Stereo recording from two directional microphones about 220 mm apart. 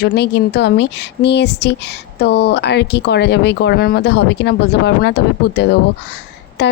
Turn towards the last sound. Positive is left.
turn(degrees=50)  # may be behind; listen again after turning